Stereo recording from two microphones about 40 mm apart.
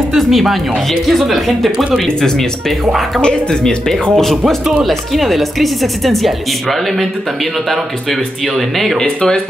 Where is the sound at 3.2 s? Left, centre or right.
Left.